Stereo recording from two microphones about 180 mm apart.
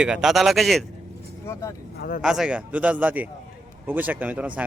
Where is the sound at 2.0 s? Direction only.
50° left (ahead or behind).